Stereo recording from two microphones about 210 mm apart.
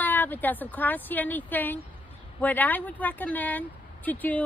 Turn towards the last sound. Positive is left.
turn(degrees=10)  # may be behind; listen again after turning